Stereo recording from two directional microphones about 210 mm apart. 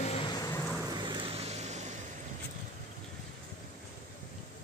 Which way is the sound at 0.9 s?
20° right (ahead or behind).